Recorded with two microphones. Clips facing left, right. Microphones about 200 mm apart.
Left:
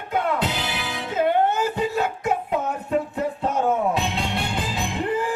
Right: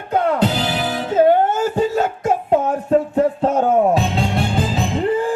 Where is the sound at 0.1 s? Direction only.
40° right (ahead or behind).